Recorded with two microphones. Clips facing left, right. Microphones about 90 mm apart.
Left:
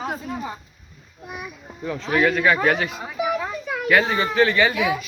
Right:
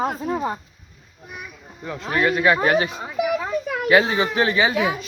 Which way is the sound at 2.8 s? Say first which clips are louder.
Right 2 dB; 20° right (ahead or behind).